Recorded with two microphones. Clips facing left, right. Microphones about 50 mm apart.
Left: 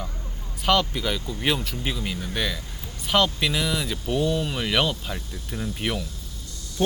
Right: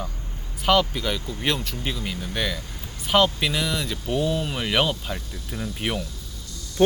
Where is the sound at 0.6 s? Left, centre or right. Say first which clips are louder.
Right 2 dB; centre.